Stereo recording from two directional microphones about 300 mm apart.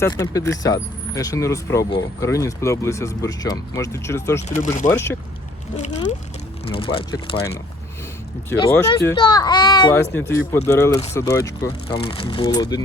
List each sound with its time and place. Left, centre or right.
0.0 s speech: centre
4.4 s speech: left
4.9 s speech: centre
5.7 s speech: left
8.6 s speech: centre